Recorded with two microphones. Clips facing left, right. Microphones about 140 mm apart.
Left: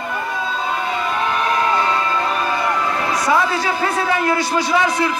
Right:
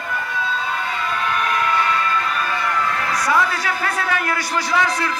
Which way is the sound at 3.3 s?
25° left (ahead or behind).